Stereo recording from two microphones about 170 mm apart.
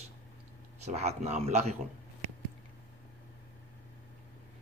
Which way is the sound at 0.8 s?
40° right (ahead or behind).